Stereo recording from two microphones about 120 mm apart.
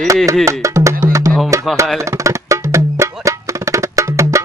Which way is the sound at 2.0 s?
25° right (ahead or behind).